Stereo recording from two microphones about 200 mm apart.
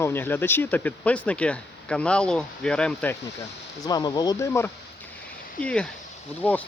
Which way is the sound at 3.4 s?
20° left (ahead or behind).